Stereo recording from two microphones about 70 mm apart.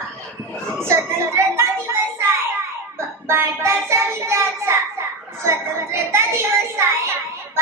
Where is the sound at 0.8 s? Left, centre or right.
Right.